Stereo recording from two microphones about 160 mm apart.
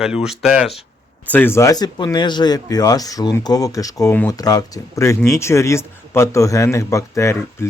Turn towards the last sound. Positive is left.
turn(degrees=15)  # may be behind; listen again after turning